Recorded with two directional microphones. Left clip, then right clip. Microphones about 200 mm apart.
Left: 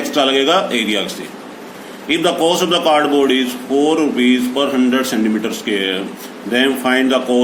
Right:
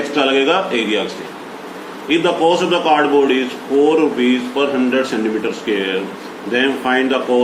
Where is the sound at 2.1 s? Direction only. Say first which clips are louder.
Right 1 dB; 60° left (ahead or behind).